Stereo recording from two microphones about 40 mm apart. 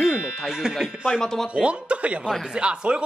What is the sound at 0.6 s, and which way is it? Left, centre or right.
Speech, centre.